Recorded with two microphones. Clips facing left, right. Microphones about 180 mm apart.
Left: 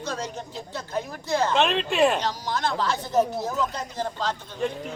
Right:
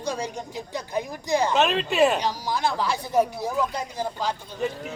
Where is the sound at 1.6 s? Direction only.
Centre (ahead or behind).